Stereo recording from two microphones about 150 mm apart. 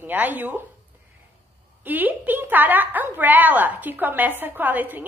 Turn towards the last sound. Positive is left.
turn(degrees=-10)  # may be behind; listen again after turning